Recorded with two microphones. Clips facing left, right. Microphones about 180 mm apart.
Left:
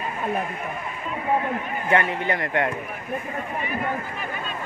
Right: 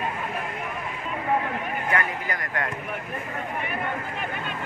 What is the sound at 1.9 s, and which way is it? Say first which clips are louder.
Speech: left 7 dB; 25° left (ahead or behind).